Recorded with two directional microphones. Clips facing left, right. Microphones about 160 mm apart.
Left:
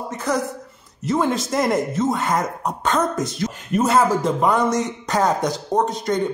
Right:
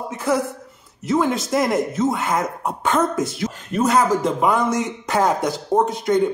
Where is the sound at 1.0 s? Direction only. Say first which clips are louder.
Right 1 dB; centre (ahead or behind).